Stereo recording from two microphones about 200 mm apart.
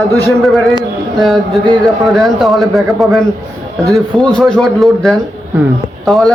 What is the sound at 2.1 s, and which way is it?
Speech, centre (ahead or behind).